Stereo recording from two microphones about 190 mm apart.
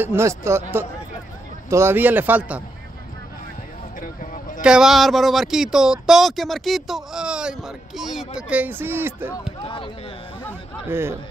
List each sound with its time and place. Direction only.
0.0 s speech: 15° right (ahead or behind)
4.0 s a sound: 45° left (ahead or behind)
4.6 s speech: 5° right (ahead or behind)
9.6 s speech: 30° left (ahead or behind)
10.9 s speech: 15° right (ahead or behind)